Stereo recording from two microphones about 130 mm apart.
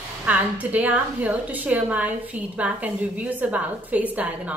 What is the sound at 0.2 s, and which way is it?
A woman's voice, 10° right (ahead or behind).